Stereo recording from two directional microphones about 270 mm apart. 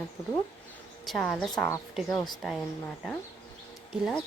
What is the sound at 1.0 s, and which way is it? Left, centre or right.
Speech, centre.